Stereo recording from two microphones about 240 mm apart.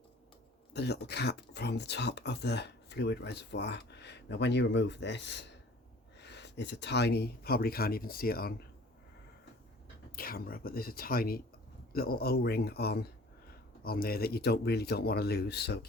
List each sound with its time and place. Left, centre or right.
0.7 s speech: left
10.2 s speech: left